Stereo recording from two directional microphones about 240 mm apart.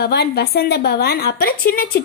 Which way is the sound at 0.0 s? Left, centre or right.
Left.